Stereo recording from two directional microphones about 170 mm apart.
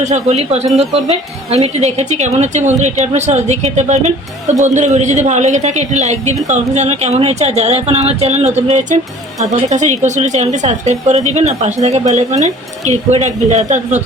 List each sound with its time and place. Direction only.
0.0 s speech: 40° right (ahead or behind)